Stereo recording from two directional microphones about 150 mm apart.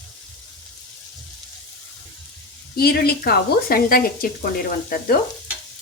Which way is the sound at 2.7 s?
90° left.